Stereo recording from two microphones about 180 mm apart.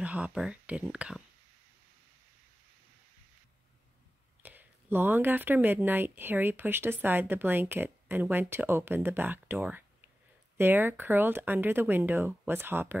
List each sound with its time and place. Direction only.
0.0 s speech: 5° right (ahead or behind)
4.4 s speech: 10° right (ahead or behind)